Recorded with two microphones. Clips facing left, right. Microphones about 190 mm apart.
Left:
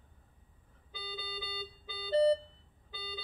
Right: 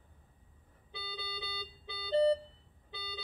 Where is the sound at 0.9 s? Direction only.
25° right (ahead or behind).